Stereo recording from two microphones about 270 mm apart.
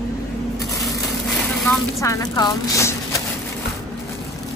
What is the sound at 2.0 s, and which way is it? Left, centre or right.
Speech, centre.